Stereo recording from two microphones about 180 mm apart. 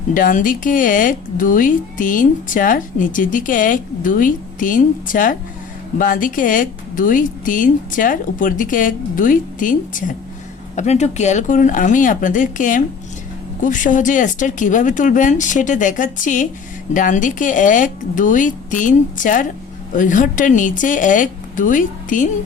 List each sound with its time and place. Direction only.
0.1 s speech: 50° left (ahead or behind)